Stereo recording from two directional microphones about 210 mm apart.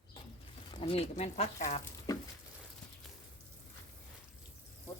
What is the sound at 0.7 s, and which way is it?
Speech, 25° left (ahead or behind).